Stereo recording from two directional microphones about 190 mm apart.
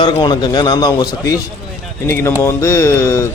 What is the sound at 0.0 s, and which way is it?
A man's voice, 25° left (ahead or behind).